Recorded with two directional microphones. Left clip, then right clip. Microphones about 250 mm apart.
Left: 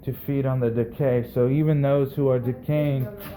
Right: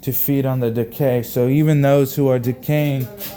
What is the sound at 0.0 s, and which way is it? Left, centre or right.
Speech, right.